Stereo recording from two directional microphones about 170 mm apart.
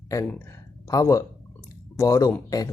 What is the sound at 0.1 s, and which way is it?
Speech, 20° left (ahead or behind).